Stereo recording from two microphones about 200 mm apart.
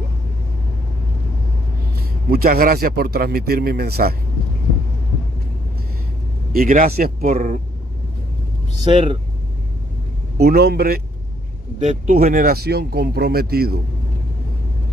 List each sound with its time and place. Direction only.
2.0 s a man's voice: 50° right (ahead or behind)
6.5 s a man's voice: 45° right (ahead or behind)
8.8 s speech: 25° right (ahead or behind)
10.3 s a man's voice: 50° right (ahead or behind)
11.8 s a man's voice: 35° right (ahead or behind)